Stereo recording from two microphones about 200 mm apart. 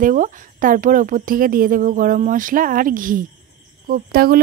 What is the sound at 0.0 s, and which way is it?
Speech, 40° right (ahead or behind).